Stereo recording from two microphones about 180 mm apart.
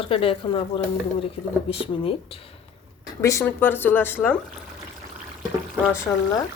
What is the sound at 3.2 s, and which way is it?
Speech, 15° left (ahead or behind).